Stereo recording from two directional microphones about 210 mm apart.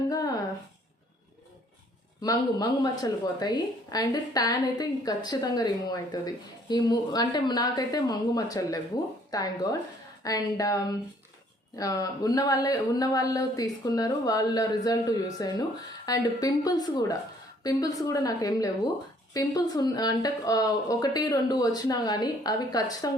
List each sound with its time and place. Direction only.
2.2 s a woman's voice: 20° left (ahead or behind)